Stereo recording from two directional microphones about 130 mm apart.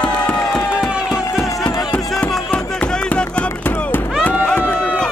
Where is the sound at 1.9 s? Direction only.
5° left (ahead or behind).